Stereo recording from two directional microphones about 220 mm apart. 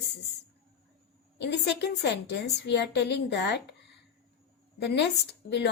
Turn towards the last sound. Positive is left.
turn(degrees=50)  # may be behind; listen again after turning